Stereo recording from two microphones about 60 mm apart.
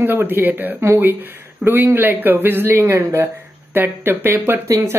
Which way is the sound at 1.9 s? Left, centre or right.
Right.